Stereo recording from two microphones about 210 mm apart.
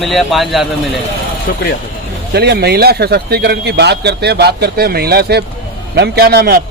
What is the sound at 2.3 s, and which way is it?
A man's voice, 50° right (ahead or behind).